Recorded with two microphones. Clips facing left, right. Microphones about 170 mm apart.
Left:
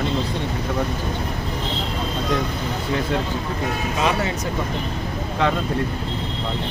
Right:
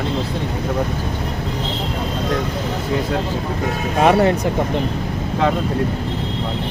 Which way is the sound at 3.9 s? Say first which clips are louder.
Right 9 dB; 55° right (ahead or behind).